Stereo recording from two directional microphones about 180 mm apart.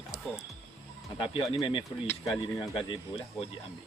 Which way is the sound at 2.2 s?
5° right (ahead or behind).